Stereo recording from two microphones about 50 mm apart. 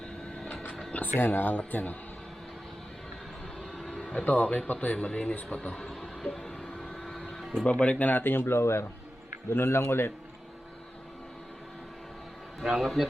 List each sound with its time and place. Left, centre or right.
1.2 s speech: left
3.8 s a sound: centre
4.2 s speech: left
5.5 s speech: centre
5.9 s a sound: centre
6.5 s vehicle: centre
6.7 s vehicle: centre
7.3 s music: centre
7.6 s speech: left
8.0 s speech: left
9.5 s speech: left
12.6 s speech: centre